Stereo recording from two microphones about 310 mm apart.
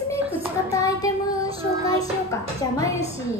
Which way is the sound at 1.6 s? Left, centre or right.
Centre.